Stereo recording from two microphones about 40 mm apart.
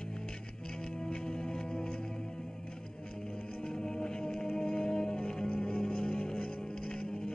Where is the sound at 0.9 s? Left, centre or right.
Centre.